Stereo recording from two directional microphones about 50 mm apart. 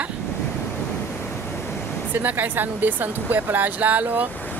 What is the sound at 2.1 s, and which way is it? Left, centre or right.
Speech, right.